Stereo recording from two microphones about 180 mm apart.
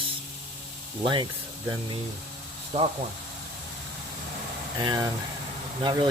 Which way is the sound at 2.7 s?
40° right (ahead or behind).